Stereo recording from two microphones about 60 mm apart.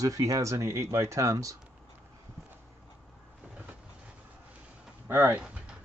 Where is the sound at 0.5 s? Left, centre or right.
Right.